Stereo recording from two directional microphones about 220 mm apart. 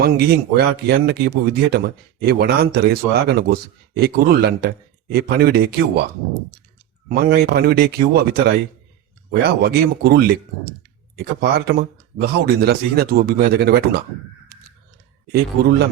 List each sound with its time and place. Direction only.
0.0 s speech: 45° right (ahead or behind)
7.1 s speech: 45° right (ahead or behind)